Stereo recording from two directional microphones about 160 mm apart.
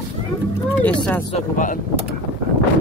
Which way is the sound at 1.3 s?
55° left (ahead or behind).